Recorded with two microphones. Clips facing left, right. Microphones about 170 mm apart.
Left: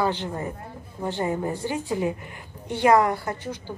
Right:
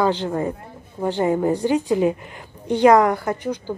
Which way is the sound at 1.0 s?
20° right (ahead or behind).